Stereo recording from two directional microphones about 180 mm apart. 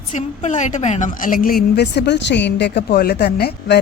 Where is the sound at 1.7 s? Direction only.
65° left (ahead or behind).